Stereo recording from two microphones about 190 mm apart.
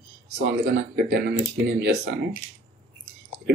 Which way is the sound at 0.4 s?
60° right (ahead or behind).